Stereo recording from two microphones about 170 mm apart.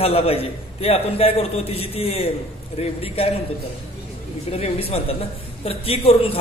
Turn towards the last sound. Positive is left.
turn(degrees=35)  # may be behind; listen again after turning